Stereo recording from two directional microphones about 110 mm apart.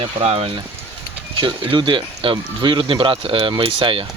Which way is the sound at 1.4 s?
45° right (ahead or behind).